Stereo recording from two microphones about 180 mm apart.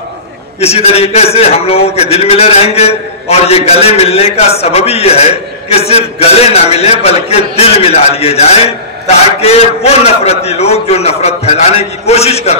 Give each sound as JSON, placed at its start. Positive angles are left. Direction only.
{"t": 0.6, "sound": "a man's voice", "side_deg": 35}